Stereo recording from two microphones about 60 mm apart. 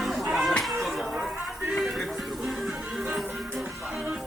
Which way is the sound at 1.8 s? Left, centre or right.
Centre.